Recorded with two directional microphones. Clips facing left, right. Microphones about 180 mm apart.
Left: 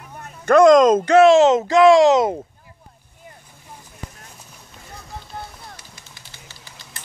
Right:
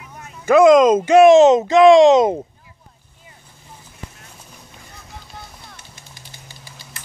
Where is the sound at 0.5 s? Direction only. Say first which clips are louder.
Right 1 dB; 5° right (ahead or behind); by 2.4 s 20° right (ahead or behind).